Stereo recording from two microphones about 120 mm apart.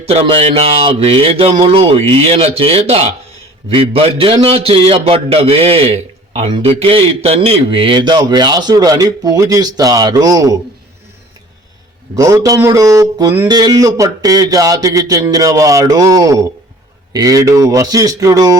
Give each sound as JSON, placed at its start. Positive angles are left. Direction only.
{"t": 0.0, "sound": "a man's voice", "side_deg": -55}
{"t": 12.1, "sound": "speech", "side_deg": -30}